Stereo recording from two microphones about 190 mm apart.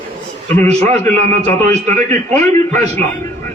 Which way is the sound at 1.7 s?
40° right (ahead or behind).